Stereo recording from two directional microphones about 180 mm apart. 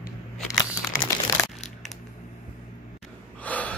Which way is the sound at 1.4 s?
20° left (ahead or behind).